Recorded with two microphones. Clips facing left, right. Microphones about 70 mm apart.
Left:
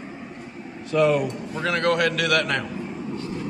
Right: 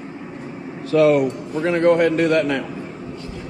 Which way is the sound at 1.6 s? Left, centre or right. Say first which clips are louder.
Right 6 dB; left.